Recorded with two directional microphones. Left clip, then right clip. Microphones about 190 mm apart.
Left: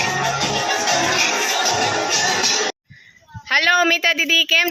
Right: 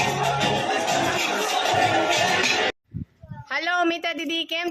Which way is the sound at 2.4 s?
50° left (ahead or behind).